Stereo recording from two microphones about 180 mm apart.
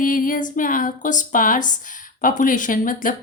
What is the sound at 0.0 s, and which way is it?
Speech, 50° left (ahead or behind).